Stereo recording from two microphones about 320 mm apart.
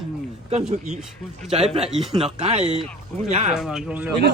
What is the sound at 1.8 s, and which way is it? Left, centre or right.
Speech, centre.